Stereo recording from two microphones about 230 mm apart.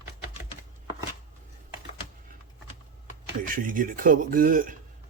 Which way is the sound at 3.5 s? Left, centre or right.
Right.